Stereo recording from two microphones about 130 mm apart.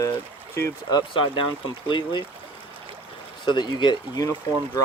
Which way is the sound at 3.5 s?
35° left (ahead or behind).